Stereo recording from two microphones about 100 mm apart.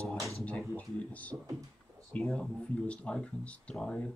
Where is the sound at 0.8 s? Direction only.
15° left (ahead or behind).